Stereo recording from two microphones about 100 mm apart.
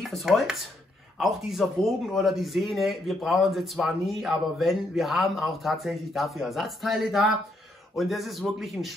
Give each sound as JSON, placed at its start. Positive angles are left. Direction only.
{"t": 0.1, "sound": "speech", "side_deg": 0}